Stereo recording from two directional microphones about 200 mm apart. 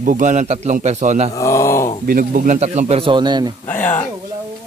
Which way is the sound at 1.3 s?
15° left (ahead or behind).